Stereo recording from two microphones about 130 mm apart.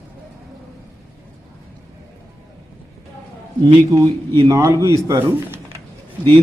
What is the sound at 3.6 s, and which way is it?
Speech, 25° right (ahead or behind).